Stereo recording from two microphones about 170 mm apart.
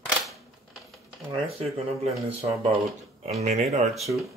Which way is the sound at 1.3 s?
35° right (ahead or behind).